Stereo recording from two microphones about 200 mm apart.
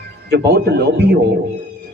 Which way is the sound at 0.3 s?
55° right (ahead or behind).